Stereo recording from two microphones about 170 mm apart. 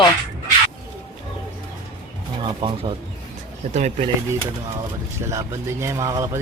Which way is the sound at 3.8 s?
45° right (ahead or behind).